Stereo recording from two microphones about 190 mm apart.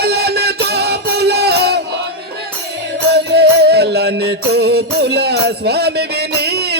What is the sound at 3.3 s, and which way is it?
Music, 60° right (ahead or behind).